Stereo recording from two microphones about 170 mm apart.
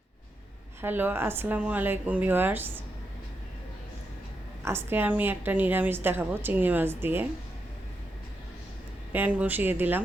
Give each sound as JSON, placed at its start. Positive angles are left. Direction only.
{"t": 0.8, "sound": "a woman's voice", "side_deg": -10}
{"t": 4.6, "sound": "a woman's voice", "side_deg": -15}
{"t": 9.1, "sound": "a woman's voice", "side_deg": -10}